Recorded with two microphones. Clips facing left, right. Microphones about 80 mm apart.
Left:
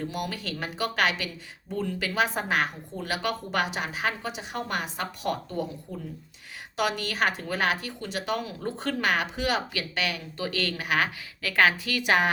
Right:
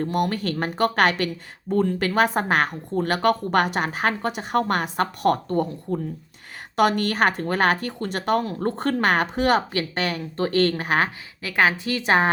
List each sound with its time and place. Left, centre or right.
0.0 s speech: right
11.4 s a woman's voice: right